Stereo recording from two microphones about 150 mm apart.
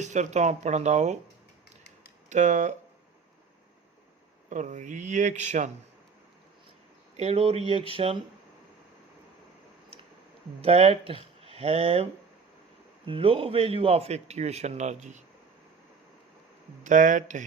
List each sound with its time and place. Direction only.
0.0 s a man's voice: 50° right (ahead or behind)
2.3 s speech: 55° right (ahead or behind)
4.4 s a man's voice: 50° right (ahead or behind)
7.2 s speech: 40° right (ahead or behind)
10.6 s speech: 40° right (ahead or behind)
13.1 s a man's voice: 35° right (ahead or behind)
16.8 s speech: 55° right (ahead or behind)